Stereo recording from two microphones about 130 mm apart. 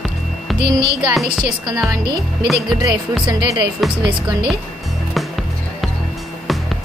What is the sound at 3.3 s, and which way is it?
Speech, 30° right (ahead or behind).